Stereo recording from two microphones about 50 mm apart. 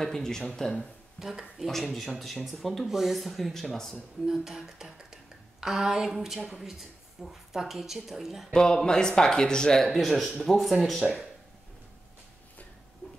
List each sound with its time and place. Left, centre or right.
0.0 s speech: centre
1.2 s speech: left
1.6 s speech: centre
4.3 s speech: centre
8.5 s speech: centre
9.8 s speech: centre